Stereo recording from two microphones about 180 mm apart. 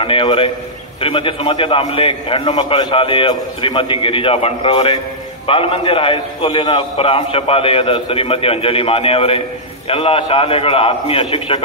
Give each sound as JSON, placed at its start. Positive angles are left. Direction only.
{"t": 0.0, "sound": "a man's voice", "side_deg": 30}